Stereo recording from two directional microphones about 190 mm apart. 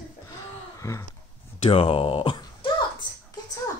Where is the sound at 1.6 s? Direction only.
30° left (ahead or behind).